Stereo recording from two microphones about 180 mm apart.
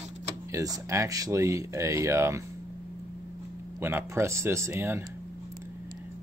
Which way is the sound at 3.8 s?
15° right (ahead or behind).